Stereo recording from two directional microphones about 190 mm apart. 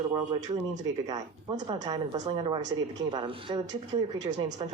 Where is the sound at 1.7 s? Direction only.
25° right (ahead or behind).